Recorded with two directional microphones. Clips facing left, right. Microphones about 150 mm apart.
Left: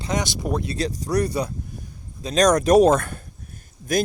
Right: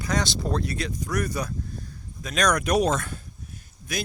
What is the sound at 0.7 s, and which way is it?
Speech, 35° left (ahead or behind).